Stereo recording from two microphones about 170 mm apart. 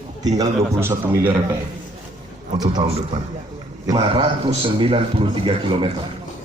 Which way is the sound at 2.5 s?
25° right (ahead or behind).